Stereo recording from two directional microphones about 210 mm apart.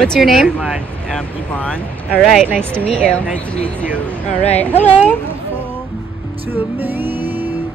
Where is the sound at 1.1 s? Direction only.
5° left (ahead or behind).